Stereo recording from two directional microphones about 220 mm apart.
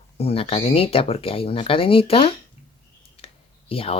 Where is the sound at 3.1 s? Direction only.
25° left (ahead or behind).